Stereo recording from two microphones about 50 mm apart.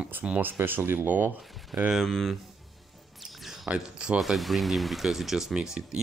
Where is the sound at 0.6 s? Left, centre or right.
Right.